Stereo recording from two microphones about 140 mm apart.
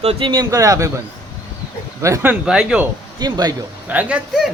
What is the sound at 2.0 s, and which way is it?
Speech, 20° right (ahead or behind).